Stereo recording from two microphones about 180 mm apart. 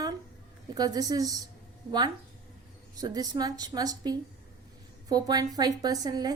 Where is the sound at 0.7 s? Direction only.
20° right (ahead or behind).